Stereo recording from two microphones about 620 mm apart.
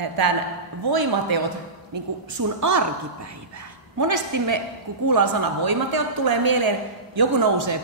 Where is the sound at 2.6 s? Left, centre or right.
Right.